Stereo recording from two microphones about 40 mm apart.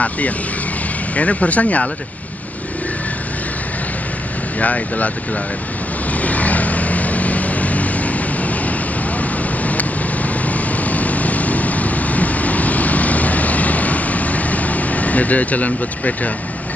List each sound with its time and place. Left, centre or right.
1.1 s speech: left
4.6 s speech: left
6.2 s vehicle: left